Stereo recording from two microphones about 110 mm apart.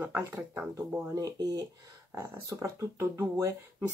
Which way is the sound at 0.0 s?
20° right (ahead or behind).